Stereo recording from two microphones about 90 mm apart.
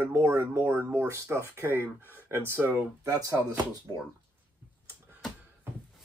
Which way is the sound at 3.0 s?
40° right (ahead or behind).